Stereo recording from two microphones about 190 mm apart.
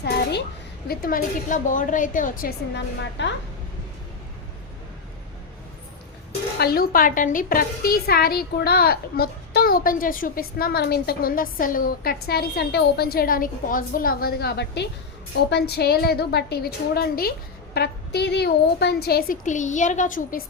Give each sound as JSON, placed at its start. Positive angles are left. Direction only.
{"t": 0.0, "sound": "a child's voice", "side_deg": 60}
{"t": 0.9, "sound": "a woman's voice", "side_deg": 50}
{"t": 6.6, "sound": "a woman's voice", "side_deg": 55}